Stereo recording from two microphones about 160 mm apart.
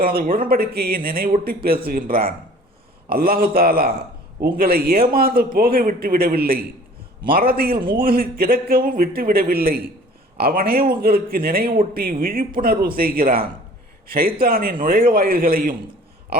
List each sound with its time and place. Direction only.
0.0 s a man's voice: 70° right (ahead or behind)